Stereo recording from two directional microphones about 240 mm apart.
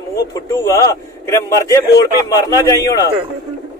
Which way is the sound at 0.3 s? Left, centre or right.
Centre.